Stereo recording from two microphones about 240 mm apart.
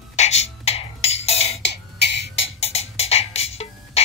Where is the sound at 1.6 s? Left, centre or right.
Left.